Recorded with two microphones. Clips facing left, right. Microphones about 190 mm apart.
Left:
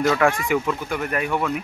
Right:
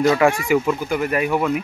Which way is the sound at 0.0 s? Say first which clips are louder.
Right 3 dB; 10° right (ahead or behind).